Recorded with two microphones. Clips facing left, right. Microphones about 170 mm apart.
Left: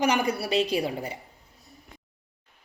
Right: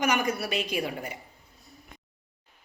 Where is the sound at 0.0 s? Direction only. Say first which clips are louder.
Left 2 dB; 30° left (ahead or behind).